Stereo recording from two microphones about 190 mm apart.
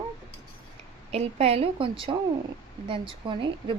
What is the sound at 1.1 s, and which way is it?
A woman's voice, 30° right (ahead or behind).